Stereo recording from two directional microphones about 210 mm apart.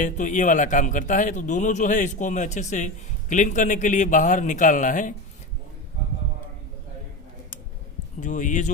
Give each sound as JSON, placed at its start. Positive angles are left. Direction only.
{"t": 0.0, "sound": "a man's voice", "side_deg": 40}
{"t": 8.2, "sound": "a man's voice", "side_deg": 40}